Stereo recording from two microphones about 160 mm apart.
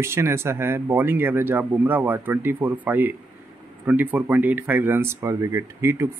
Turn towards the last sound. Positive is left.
turn(degrees=-15)  # may be behind; listen again after turning